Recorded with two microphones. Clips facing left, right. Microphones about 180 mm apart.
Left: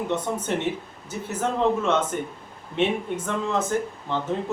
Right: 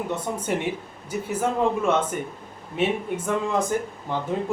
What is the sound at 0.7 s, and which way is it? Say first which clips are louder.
Speech: even; 10° right (ahead or behind).